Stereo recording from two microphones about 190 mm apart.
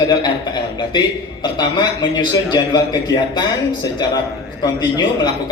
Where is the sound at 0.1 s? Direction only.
20° left (ahead or behind).